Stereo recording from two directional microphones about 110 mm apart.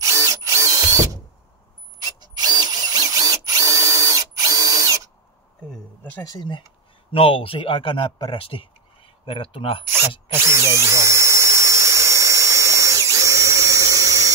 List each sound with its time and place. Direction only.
0.0 s drill: 30° right (ahead or behind)
2.1 s drill: 40° right (ahead or behind)
5.7 s a sound: 15° left (ahead or behind)
7.1 s speech: 55° left (ahead or behind)
10.3 s drill: 25° right (ahead or behind)